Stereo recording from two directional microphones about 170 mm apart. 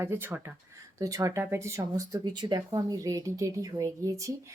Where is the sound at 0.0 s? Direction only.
15° right (ahead or behind).